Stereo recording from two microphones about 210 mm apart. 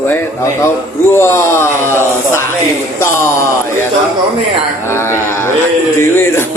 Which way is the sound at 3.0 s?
10° left (ahead or behind).